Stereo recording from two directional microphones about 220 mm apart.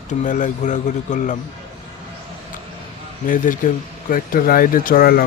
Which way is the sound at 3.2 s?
35° left (ahead or behind).